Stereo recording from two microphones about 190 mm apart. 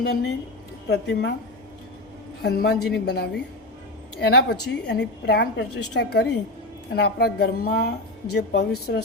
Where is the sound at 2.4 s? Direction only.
55° left (ahead or behind).